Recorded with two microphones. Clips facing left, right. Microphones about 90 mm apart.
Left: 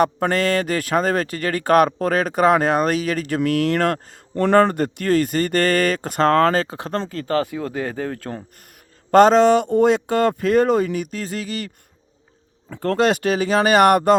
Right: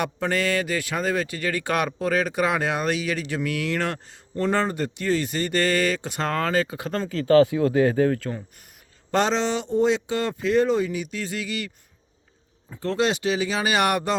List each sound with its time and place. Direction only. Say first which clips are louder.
0.0 s speech: left 6 dB; 45° left (ahead or behind)
7.7 s speech: right 6 dB; 10° right (ahead or behind)
8.2 s speech: left 1 dB; 40° left (ahead or behind)
12.7 s speech: left 5 dB; 50° left (ahead or behind)